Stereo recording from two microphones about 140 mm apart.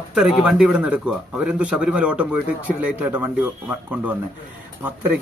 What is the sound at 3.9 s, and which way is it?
Speech, 10° right (ahead or behind).